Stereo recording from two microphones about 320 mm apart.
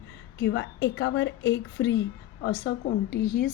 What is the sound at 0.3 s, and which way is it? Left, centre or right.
A woman's voice, left.